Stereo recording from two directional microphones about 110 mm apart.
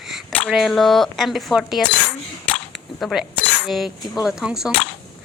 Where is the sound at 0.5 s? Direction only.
Centre (ahead or behind).